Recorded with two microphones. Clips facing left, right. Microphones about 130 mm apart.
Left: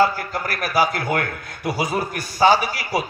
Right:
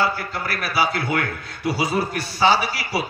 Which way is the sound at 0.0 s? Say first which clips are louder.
Left 4 dB; 45° left (ahead or behind).